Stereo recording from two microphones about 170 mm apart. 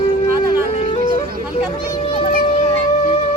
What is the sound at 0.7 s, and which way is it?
Music, 35° left (ahead or behind).